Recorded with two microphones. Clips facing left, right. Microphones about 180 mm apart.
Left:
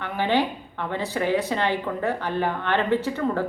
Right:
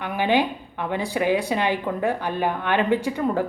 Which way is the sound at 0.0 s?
15° right (ahead or behind).